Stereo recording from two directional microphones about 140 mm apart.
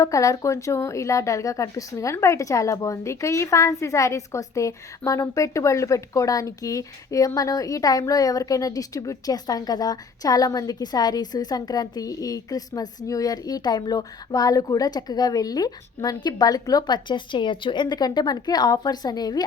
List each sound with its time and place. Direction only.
0.0 s a woman's voice: 25° left (ahead or behind)